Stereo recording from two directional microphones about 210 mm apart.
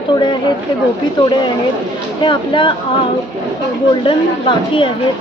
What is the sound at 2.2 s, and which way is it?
Speech, 25° left (ahead or behind).